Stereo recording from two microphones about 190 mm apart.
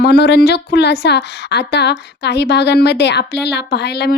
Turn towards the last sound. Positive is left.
turn(degrees=60)  # may be behind; listen again after turning